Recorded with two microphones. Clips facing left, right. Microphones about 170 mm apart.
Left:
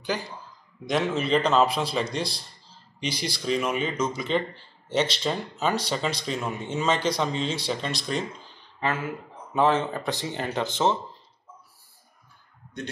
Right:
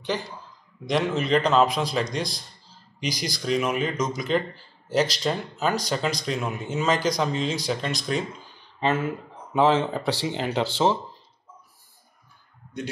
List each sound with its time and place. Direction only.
0.8 s speech: centre (ahead or behind)
8.7 s speech: 25° right (ahead or behind)
9.5 s speech: 10° right (ahead or behind)